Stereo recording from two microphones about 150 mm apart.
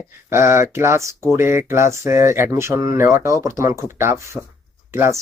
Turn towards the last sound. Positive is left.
turn(degrees=-15)  # may be behind; listen again after turning